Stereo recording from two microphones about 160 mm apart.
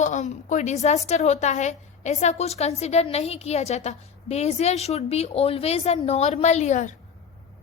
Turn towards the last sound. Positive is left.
turn(degrees=50)  # may be behind; listen again after turning